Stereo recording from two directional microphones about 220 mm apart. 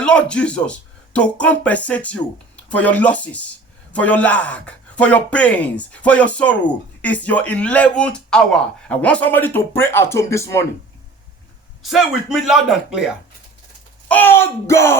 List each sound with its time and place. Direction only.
0.0 s speech: 5° left (ahead or behind)
11.8 s speech: centre (ahead or behind)
14.1 s speech: 10° left (ahead or behind)